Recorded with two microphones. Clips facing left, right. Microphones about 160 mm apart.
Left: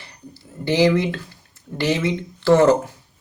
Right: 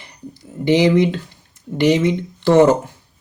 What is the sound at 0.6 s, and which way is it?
Speech, 20° right (ahead or behind).